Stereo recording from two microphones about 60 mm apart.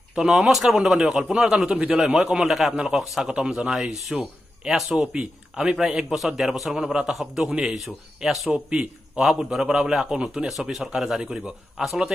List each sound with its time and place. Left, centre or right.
0.1 s a man's voice: centre
1.8 s a man's voice: centre
2.1 s a man's voice: centre
8.5 s a man's voice: centre
9.2 s a man's voice: centre